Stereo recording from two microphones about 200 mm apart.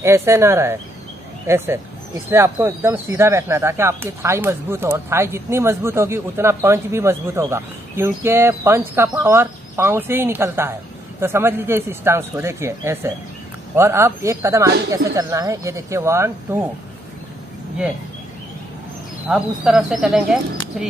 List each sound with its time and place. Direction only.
0.0 s speech: 15° right (ahead or behind)
19.2 s speech: 5° right (ahead or behind)